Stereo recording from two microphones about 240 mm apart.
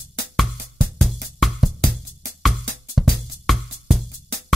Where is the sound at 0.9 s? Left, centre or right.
Centre.